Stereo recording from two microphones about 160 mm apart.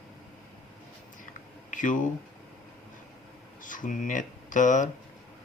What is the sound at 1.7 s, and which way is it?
Speech, 55° left (ahead or behind).